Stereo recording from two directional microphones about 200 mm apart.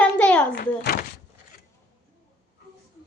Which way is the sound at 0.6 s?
45° left (ahead or behind).